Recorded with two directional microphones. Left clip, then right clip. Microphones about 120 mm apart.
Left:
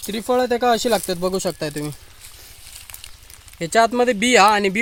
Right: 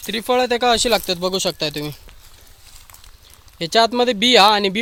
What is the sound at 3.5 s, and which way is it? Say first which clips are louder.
Speech: right 1 dB; 30° right (ahead or behind).